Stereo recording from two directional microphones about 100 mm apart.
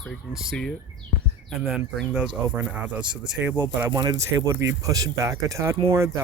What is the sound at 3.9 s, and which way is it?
Speech, 40° right (ahead or behind).